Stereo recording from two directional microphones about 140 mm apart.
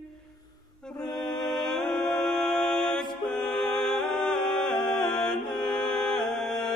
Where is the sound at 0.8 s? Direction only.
5° left (ahead or behind).